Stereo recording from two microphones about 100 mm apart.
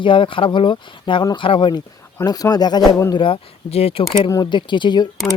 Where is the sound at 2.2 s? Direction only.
40° left (ahead or behind).